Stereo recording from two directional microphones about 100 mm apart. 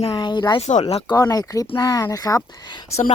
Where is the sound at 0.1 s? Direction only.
45° left (ahead or behind).